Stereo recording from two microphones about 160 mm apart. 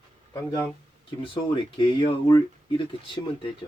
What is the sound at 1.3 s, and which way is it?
Speech, 30° left (ahead or behind).